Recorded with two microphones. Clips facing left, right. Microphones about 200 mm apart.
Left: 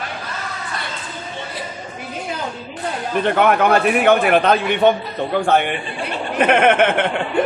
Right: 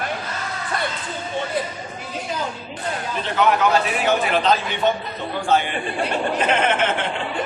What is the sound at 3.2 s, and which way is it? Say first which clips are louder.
A man's voice: left 3 dB; 55° left (ahead or behind).